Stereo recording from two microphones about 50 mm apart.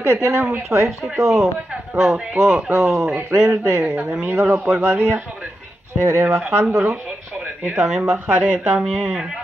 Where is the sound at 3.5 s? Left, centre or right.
Right.